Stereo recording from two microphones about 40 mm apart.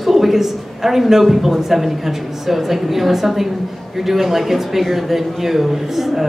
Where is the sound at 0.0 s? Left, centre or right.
Centre.